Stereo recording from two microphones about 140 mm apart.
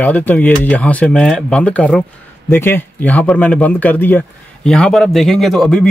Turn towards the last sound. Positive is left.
turn(degrees=5)  # may be behind; listen again after turning